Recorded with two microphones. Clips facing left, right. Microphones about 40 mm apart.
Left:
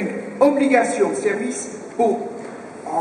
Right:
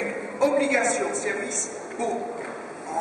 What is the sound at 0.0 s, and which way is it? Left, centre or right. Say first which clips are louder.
A man's voice: left 7 dB; centre.